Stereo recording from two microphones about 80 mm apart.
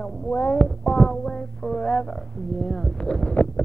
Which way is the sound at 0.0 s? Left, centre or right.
Centre.